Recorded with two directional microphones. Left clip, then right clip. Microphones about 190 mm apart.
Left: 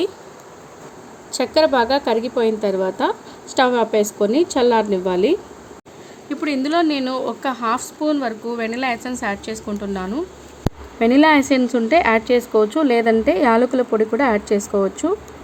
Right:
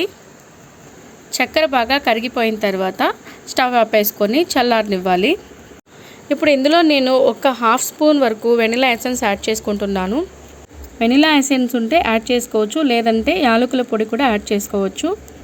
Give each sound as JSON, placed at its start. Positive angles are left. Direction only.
{"t": 1.3, "sound": "a woman's voice", "side_deg": -15}